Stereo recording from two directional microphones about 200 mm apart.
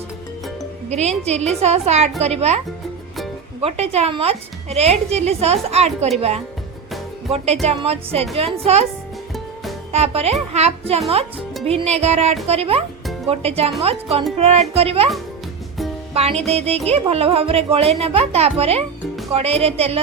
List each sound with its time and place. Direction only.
0.9 s speech: 35° right (ahead or behind)
3.6 s speech: 30° right (ahead or behind)
7.3 s speech: 30° right (ahead or behind)
9.9 s speech: 30° right (ahead or behind)
16.1 s speech: 30° right (ahead or behind)